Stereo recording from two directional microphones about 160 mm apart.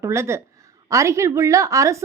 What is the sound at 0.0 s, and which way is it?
A woman's voice, 15° right (ahead or behind).